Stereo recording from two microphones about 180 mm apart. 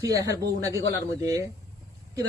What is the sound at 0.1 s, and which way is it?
A man's voice, 20° right (ahead or behind).